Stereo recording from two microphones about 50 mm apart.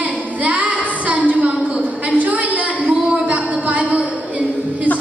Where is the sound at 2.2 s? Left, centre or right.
Right.